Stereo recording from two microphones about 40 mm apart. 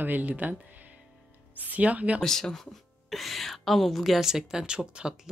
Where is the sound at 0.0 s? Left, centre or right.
Right.